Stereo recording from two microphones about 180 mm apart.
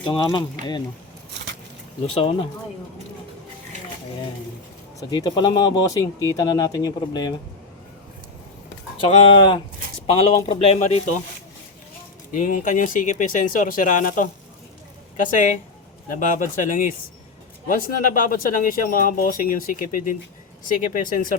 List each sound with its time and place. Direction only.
0.0 s speech: 25° left (ahead or behind)
4.9 s speech: 20° left (ahead or behind)
9.0 s speech: 30° left (ahead or behind)
12.3 s speech: 45° left (ahead or behind)